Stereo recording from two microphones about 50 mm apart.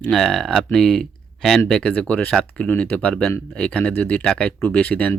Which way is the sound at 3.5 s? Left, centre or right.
Left.